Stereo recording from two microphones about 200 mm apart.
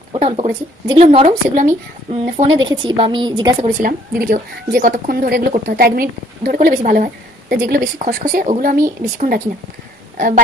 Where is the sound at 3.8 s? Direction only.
45° right (ahead or behind).